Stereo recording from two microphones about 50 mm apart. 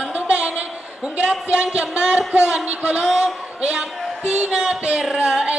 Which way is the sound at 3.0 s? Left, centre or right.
Centre.